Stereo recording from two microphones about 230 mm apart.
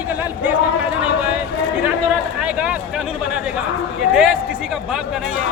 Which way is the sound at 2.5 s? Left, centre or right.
Centre.